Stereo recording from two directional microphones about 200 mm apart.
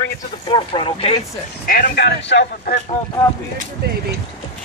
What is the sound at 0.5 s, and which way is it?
Speech, 25° left (ahead or behind).